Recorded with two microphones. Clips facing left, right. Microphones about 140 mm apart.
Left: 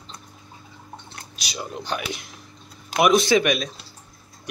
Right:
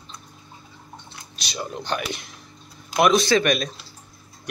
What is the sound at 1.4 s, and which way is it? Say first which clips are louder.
Speech: right 1 dB; 5° left (ahead or behind).